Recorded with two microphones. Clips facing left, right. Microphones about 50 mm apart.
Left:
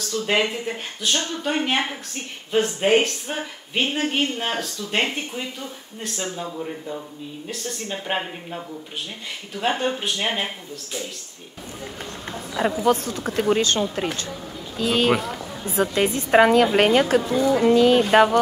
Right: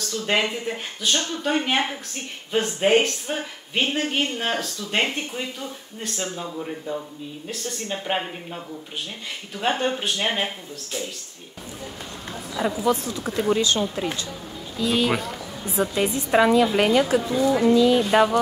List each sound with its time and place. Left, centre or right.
0.0 s speech: centre
12.5 s a woman's voice: left